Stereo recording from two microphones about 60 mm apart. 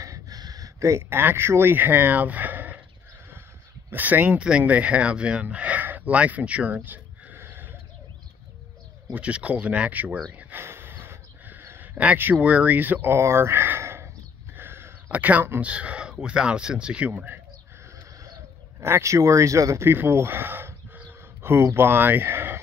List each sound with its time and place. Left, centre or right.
0.0 s a sound: right
1.1 s speech: right
3.9 s speech: right
4.4 s speech: centre; by 7.7 s right
9.1 s speech: right
10.6 s a sound: right
12.4 s speech: right
13.1 s a sound: right
15.0 s speech: right
18.8 s speech: right
19.8 s speech: right